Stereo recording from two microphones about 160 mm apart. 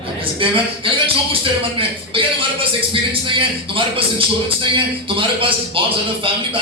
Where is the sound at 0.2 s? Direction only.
35° right (ahead or behind).